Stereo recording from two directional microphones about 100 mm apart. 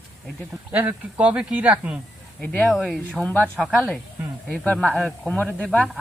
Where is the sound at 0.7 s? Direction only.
15° right (ahead or behind).